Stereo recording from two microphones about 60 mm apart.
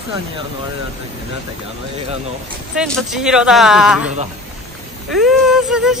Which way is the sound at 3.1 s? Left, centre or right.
Centre.